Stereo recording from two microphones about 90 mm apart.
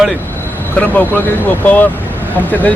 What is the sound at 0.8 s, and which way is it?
A man's voice, 15° left (ahead or behind).